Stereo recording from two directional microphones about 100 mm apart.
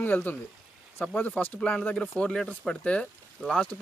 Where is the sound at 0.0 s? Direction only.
20° left (ahead or behind).